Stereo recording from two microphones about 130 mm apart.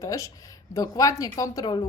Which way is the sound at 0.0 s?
25° left (ahead or behind).